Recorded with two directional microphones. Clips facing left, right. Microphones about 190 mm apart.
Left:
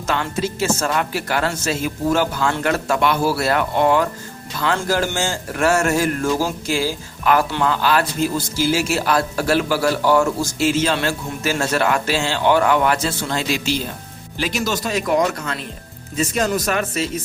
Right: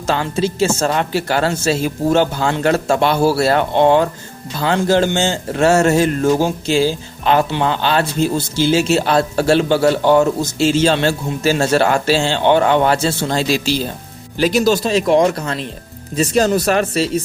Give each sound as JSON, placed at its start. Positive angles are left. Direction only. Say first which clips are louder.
{"t": 0.1, "sound": "speech", "louder": "right 4 dB", "side_deg": -30}